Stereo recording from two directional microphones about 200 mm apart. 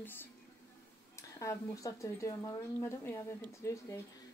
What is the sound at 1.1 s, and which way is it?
A woman's voice, 15° left (ahead or behind).